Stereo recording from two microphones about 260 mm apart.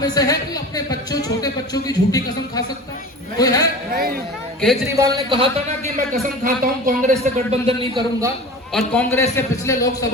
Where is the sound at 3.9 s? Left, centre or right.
Right.